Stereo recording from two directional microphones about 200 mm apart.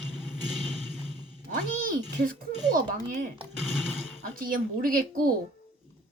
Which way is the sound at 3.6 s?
Centre (ahead or behind).